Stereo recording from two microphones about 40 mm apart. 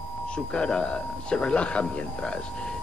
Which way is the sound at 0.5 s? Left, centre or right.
Left.